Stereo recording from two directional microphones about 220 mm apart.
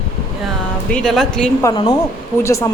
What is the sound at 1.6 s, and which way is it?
A woman's voice, 25° left (ahead or behind).